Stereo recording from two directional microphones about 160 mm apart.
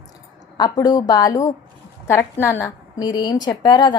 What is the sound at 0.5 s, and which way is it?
A woman's voice, 25° left (ahead or behind).